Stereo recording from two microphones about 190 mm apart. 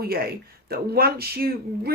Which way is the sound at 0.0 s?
55° right (ahead or behind).